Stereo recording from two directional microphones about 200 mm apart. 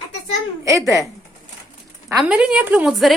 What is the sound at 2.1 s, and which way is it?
A woman's voice, 5° right (ahead or behind).